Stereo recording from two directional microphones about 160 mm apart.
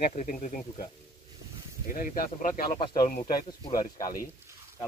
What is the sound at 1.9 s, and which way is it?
Speech, 60° left (ahead or behind).